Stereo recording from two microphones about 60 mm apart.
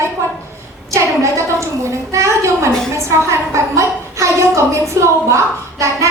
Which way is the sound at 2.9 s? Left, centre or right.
Right.